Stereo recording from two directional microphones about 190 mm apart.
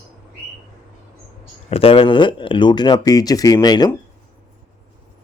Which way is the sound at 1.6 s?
30° left (ahead or behind).